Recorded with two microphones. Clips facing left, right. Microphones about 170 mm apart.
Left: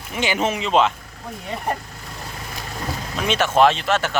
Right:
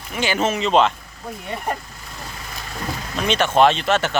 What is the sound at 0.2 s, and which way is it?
Speech, 20° left (ahead or behind).